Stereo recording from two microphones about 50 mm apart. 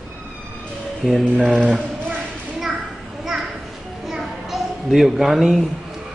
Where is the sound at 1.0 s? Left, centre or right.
Centre.